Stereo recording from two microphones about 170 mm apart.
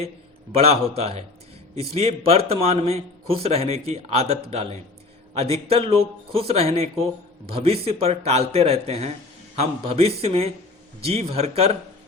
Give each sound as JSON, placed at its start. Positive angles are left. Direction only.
{"t": 0.5, "sound": "speech", "side_deg": -40}